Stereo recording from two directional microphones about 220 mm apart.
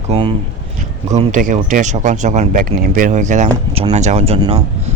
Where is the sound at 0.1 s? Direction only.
25° right (ahead or behind).